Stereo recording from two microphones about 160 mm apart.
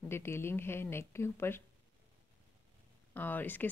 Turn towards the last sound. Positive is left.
turn(degrees=10)  # may be behind; listen again after turning